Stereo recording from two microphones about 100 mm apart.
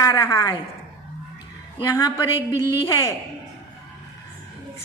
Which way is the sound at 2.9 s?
30° left (ahead or behind).